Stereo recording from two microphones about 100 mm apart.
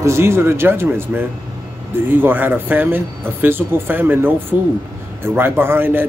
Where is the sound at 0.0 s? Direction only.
25° right (ahead or behind).